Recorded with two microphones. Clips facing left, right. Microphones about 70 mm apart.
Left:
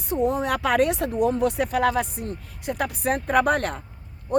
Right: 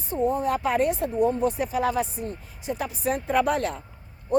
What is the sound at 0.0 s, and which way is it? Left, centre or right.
A woman's voice, left.